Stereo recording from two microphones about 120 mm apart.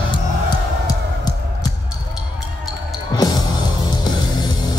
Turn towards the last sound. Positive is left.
turn(degrees=35)  # may be behind; listen again after turning